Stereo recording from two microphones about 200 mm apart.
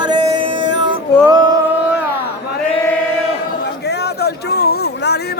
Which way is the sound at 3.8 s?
55° left (ahead or behind).